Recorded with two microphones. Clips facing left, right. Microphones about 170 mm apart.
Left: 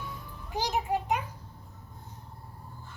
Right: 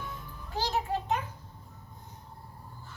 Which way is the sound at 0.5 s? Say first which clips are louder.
Left 1 dB; 15° left (ahead or behind).